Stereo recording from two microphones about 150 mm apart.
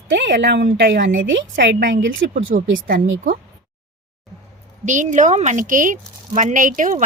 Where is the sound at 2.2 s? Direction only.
80° right; by 3.3 s 65° right (ahead or behind).